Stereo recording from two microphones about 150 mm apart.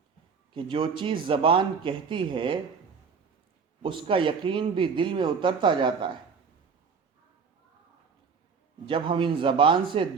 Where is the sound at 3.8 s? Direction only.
35° right (ahead or behind).